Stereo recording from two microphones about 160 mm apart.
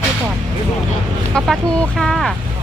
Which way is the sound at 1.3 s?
5° left (ahead or behind).